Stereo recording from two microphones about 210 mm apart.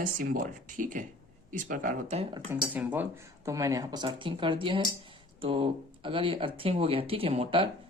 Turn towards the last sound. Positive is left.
turn(degrees=-25)  # may be behind; listen again after turning